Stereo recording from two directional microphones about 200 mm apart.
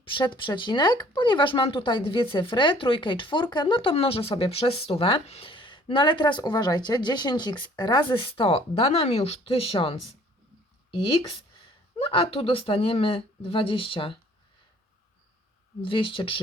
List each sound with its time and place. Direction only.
0.0 s speech: 25° left (ahead or behind)
11.2 s speech: 30° left (ahead or behind)
15.8 s speech: 25° left (ahead or behind)